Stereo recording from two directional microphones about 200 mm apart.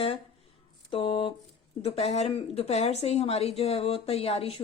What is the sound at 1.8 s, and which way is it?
Speech, 30° left (ahead or behind).